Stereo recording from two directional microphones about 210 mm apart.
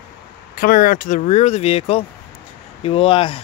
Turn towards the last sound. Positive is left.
turn(degrees=25)  # may be behind; listen again after turning